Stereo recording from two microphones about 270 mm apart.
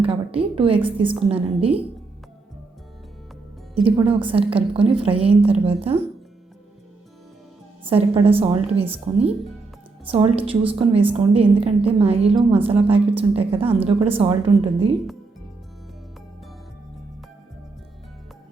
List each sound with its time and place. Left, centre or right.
0.0 s a woman's voice: right
3.8 s a woman's voice: centre
7.9 s a woman's voice: right
12.3 s a woman's voice: centre
12.6 s a woman's voice: right